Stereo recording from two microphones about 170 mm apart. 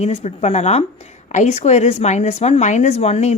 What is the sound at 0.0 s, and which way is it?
Speech, 40° left (ahead or behind).